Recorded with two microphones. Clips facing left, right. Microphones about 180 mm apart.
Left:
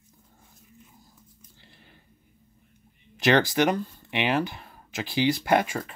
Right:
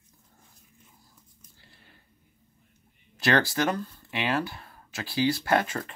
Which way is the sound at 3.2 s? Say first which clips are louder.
Left 3 dB; 20° left (ahead or behind).